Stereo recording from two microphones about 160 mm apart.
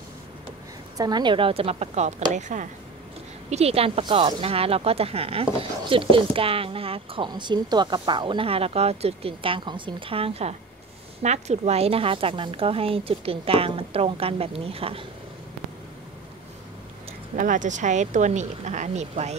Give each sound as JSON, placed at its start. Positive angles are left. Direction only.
{"t": 0.9, "sound": "speech", "side_deg": -25}
{"t": 17.4, "sound": "speech", "side_deg": -50}